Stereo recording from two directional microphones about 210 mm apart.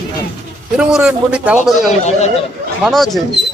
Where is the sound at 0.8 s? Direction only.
5° right (ahead or behind).